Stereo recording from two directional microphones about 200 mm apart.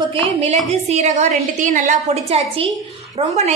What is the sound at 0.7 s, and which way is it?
A woman's voice, 35° right (ahead or behind).